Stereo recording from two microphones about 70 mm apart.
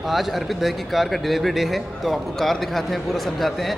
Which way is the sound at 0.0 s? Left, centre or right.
Centre.